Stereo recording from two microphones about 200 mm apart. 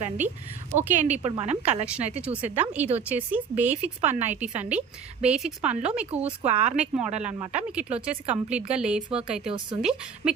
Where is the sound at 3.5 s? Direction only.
35° right (ahead or behind).